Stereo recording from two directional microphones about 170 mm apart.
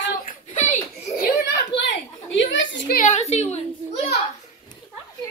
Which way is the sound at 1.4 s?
90° left.